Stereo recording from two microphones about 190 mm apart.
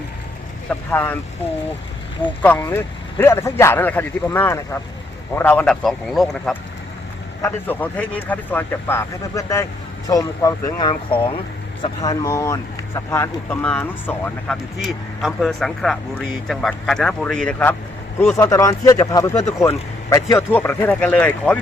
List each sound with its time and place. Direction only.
0.7 s speech: 10° left (ahead or behind)
2.2 s speech: 10° left (ahead or behind)